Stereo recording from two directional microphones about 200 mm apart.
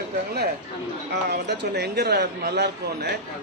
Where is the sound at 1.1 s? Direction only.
55° right (ahead or behind).